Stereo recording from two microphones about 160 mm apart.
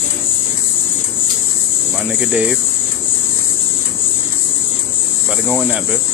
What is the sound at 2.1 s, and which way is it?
Speech, 5° right (ahead or behind).